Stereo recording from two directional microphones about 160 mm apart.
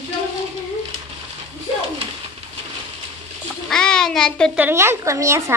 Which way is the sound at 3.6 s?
5° left (ahead or behind).